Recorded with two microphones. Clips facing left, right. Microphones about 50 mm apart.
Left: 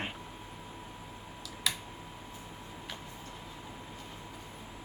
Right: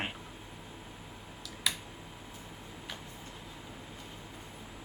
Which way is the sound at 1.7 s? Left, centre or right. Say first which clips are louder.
Even; centre.